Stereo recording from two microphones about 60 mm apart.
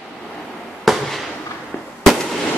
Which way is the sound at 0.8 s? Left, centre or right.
Centre.